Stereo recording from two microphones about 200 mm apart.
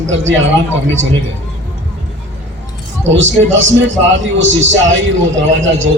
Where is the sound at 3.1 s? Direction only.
70° right (ahead or behind).